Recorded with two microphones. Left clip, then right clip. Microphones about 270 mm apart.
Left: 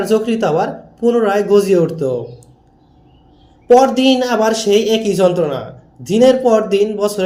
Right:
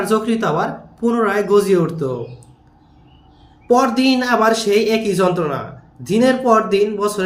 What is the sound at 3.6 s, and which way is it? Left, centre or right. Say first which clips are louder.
A man's voice: left 5 dB; centre.